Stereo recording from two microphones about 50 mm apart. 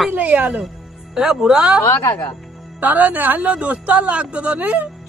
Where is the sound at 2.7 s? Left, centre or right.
Right.